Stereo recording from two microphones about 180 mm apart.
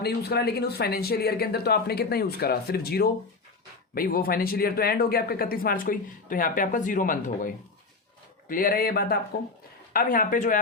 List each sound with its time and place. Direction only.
0.0 s speech: 65° left (ahead or behind); by 10.6 s 45° left (ahead or behind)